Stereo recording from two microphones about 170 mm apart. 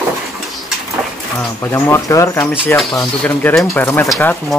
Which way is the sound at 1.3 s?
15° left (ahead or behind).